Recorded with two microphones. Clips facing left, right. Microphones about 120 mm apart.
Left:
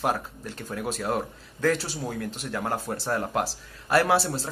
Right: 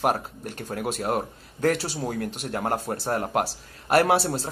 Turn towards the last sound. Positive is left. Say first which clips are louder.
# right 2 dB
turn(degrees=-60)  # may be behind; listen again after turning